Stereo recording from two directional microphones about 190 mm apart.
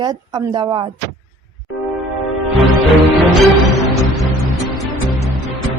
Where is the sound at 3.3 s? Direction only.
Centre (ahead or behind).